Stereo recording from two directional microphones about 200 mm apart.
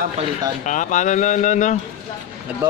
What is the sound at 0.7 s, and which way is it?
Speech, 40° left (ahead or behind).